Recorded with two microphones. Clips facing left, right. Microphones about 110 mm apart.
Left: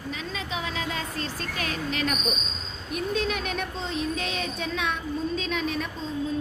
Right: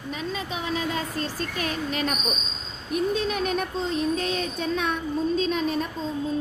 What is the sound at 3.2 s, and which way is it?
A woman's voice, 40° right (ahead or behind).